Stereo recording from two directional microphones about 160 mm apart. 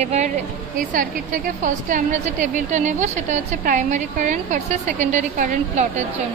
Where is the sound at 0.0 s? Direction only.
45° right (ahead or behind).